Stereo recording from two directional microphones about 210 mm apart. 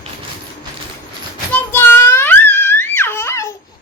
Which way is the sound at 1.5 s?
10° left (ahead or behind).